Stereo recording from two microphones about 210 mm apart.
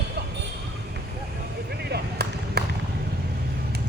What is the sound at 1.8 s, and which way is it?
Basketball bounce, 50° right (ahead or behind).